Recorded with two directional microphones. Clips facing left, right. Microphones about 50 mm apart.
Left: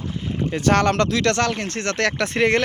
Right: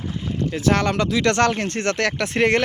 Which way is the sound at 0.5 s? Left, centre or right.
Centre.